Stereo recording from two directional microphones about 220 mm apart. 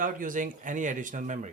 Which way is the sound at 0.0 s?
35° right (ahead or behind).